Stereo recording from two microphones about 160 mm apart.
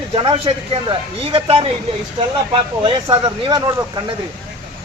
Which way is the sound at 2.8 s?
30° right (ahead or behind).